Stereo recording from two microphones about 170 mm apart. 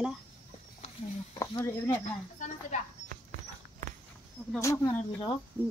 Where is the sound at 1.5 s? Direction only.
15° left (ahead or behind).